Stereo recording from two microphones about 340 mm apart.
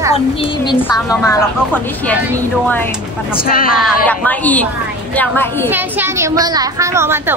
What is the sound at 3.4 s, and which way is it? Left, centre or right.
Speech, left.